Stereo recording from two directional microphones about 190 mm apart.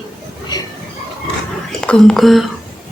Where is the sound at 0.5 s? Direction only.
20° left (ahead or behind).